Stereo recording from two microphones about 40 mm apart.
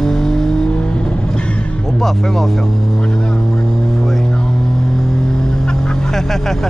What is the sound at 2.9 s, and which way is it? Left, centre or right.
Vehicle, left.